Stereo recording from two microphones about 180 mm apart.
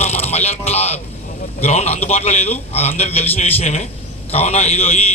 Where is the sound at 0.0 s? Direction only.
35° left (ahead or behind).